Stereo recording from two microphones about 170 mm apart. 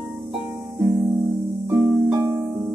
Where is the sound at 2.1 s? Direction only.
15° right (ahead or behind).